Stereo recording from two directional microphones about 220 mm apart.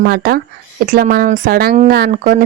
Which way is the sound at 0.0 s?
45° right (ahead or behind).